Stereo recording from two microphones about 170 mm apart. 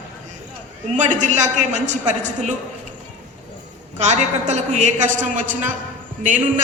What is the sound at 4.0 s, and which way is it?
A man's voice, 40° right (ahead or behind).